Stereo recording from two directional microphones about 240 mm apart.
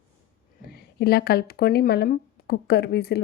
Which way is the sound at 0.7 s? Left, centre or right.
Left.